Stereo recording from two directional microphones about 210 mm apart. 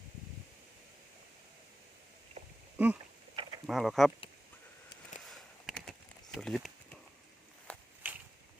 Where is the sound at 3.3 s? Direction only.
25° right (ahead or behind).